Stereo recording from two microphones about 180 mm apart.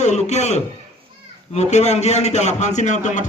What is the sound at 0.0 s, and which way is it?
A man's voice, 40° left (ahead or behind).